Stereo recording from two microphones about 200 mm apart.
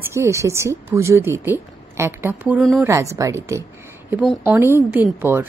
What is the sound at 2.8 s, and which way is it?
Speech, 15° right (ahead or behind).